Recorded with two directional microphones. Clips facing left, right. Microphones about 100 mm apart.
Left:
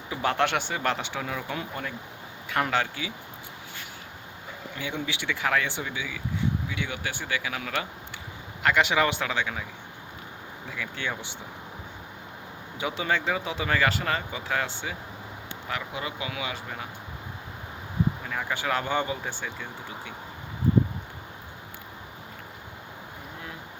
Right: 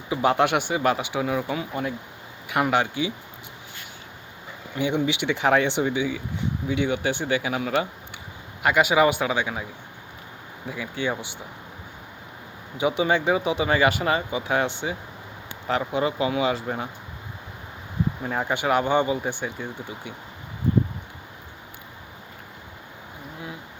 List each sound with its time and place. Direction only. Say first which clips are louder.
0.1 s speech: right 5 dB; 15° right (ahead or behind)
4.8 s speech: right 10 dB; 20° right (ahead or behind)
8.6 s speech: right 4 dB; 10° right (ahead or behind)
10.7 s speech: right 6 dB; 15° right (ahead or behind)
12.7 s speech: right 6 dB; 20° right (ahead or behind)
15.6 s speech: right 10 dB; 35° right (ahead or behind)
18.2 s speech: right 5 dB; 30° right (ahead or behind)
18.5 s speech: right 6 dB; 20° right (ahead or behind)